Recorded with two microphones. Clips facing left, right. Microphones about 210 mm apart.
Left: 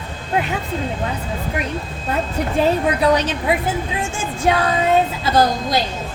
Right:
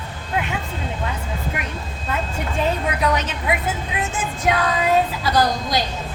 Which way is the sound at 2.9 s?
35° left (ahead or behind).